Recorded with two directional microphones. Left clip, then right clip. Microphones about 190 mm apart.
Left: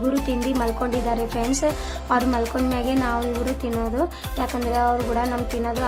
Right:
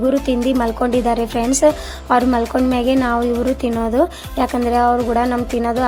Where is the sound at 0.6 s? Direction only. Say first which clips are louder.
Right 7 dB; 30° right (ahead or behind).